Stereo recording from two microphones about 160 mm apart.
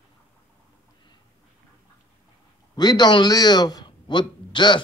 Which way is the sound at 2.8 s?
25° left (ahead or behind).